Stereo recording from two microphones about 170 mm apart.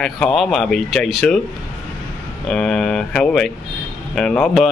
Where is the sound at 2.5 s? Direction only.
5° left (ahead or behind).